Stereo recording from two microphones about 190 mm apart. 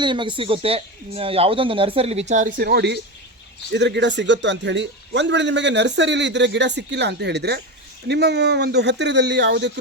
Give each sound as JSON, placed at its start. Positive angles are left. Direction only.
{"t": 0.0, "sound": "speech", "side_deg": -25}
{"t": 2.6, "sound": "a man's voice", "side_deg": -60}